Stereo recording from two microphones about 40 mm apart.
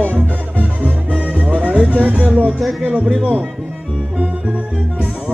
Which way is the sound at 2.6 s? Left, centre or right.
Centre.